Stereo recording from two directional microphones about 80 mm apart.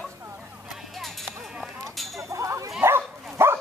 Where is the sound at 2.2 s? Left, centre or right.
Right.